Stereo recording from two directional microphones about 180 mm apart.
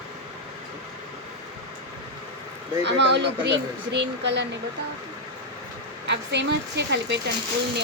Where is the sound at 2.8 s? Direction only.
75° right (ahead or behind).